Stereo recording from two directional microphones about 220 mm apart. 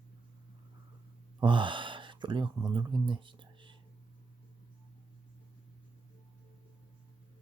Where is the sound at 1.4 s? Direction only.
20° right (ahead or behind).